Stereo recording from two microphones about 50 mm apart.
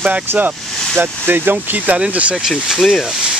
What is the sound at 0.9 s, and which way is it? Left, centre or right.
Speech, right.